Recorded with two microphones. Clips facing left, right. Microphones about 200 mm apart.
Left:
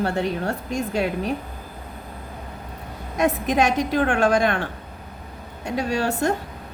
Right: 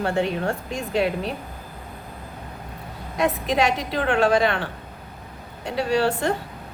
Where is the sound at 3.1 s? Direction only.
45° left (ahead or behind).